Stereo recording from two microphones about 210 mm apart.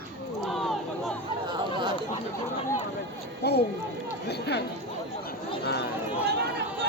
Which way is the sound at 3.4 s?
50° left (ahead or behind).